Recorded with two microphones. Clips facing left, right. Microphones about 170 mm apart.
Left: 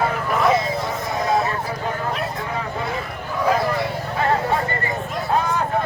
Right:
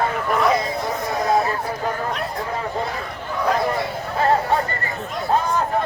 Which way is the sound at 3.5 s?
Centre (ahead or behind).